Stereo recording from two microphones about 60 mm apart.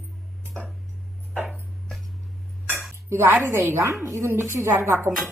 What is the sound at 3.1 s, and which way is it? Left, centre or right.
A woman's voice, right.